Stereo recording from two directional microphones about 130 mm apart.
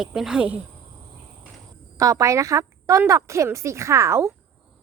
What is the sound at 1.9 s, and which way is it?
A woman's voice, 25° right (ahead or behind).